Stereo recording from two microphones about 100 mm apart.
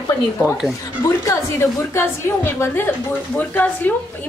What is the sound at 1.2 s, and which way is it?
A woman's voice, 25° left (ahead or behind).